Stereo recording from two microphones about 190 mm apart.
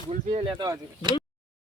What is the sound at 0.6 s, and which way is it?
Speech, 20° right (ahead or behind).